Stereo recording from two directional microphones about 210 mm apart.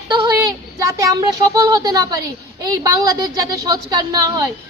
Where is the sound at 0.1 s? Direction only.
20° right (ahead or behind).